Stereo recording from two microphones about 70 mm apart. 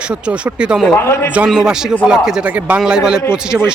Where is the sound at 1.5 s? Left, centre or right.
Centre.